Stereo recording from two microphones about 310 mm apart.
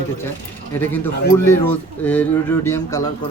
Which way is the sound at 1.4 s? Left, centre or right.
Centre.